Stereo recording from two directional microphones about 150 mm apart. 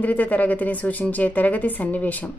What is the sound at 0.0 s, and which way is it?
A woman's voice, 10° left (ahead or behind).